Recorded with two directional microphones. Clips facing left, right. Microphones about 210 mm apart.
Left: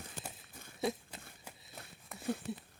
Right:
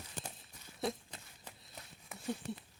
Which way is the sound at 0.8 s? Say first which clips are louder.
Left 2 dB; 5° left (ahead or behind).